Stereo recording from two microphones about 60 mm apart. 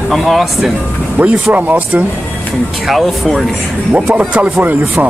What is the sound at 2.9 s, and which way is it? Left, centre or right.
Speech, centre.